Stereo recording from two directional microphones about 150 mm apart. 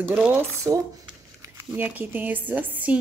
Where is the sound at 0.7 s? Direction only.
25° right (ahead or behind).